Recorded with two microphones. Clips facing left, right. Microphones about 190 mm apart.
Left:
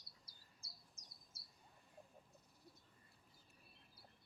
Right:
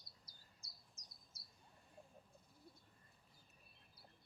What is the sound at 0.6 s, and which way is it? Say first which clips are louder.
Bird: left 1 dB; 30° left (ahead or behind).